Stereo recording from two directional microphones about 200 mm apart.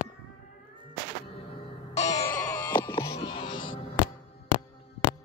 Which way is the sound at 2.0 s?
15° left (ahead or behind).